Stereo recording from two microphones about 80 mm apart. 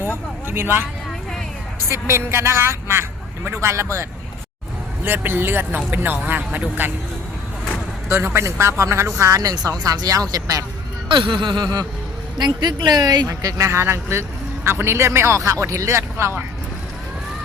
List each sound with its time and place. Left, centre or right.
0.4 s speech: right
1.9 s speech: right
5.0 s speech: right
8.1 s speech: right
11.1 s a sound: right
12.4 s speech: right